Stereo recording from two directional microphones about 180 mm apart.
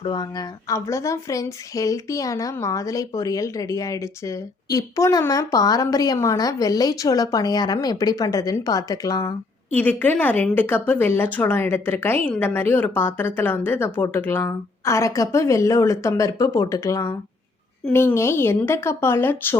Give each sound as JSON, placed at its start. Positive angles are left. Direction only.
{"t": 0.0, "sound": "a woman's voice", "side_deg": 25}